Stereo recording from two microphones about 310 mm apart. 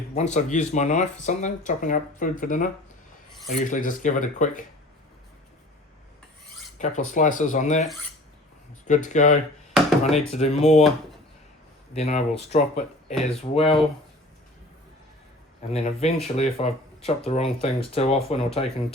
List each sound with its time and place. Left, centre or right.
0.1 s speech: left
6.7 s speech: left
8.9 s speech: left
11.9 s speech: left
15.7 s speech: centre